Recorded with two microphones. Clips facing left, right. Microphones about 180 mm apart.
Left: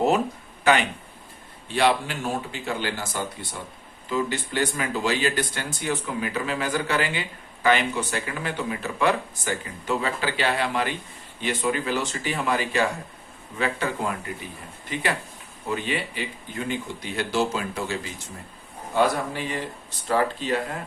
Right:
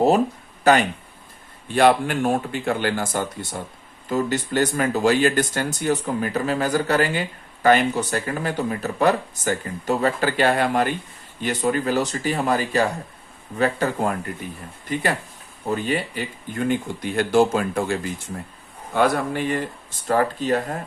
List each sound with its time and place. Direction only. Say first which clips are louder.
0.6 s speech: right 4 dB; 40° right (ahead or behind)
15.7 s speech: right 4 dB; 40° right (ahead or behind)